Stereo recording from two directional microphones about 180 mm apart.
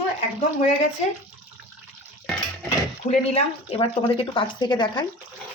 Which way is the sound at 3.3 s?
35° left (ahead or behind).